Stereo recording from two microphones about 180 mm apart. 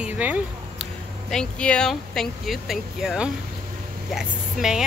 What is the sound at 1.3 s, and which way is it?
Speech, 5° left (ahead or behind).